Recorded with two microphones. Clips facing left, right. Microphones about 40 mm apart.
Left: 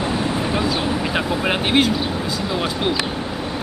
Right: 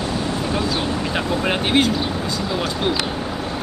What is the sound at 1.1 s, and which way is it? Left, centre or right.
Speech, centre.